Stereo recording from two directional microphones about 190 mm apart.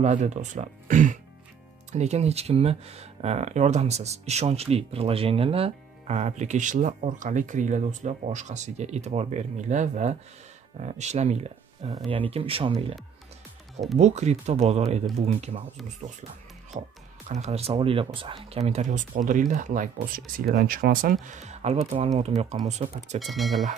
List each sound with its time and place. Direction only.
0.0 s speech: 35° right (ahead or behind)
13.9 s speech: 35° right (ahead or behind)
23.1 s speech: centre (ahead or behind)